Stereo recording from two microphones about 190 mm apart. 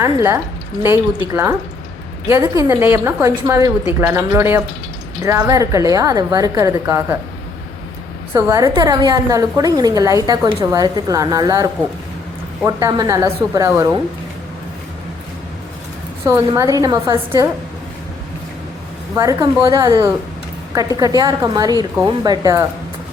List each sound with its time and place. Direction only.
0.0 s a woman's voice: 15° right (ahead or behind)
8.3 s a woman's voice: 15° right (ahead or behind)
16.2 s a woman's voice: 15° right (ahead or behind)
19.1 s a woman's voice: 15° right (ahead or behind)